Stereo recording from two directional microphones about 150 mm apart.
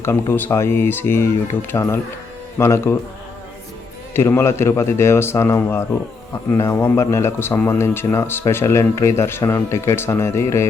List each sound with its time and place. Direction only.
0.0 s speech: 15° left (ahead or behind)
4.1 s speech: 15° left (ahead or behind)